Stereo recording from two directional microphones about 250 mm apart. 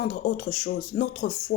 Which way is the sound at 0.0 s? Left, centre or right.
Left.